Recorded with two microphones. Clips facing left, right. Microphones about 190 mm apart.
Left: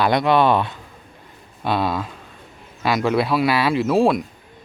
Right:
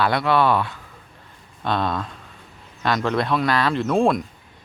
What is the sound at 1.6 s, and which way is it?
Speech, 5° left (ahead or behind).